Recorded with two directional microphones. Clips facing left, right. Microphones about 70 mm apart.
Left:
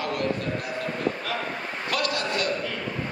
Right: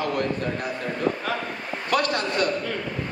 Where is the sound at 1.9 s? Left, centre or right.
Right.